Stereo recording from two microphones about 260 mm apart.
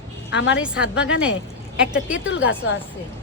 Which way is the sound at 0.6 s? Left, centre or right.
Centre.